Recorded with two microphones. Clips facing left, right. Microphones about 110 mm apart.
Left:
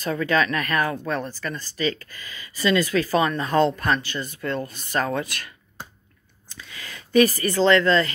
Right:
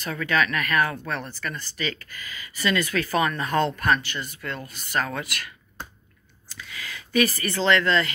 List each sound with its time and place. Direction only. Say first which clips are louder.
0.1 s speech: left 2 dB; 30° left (ahead or behind)
6.6 s speech: right 2 dB; 35° left (ahead or behind)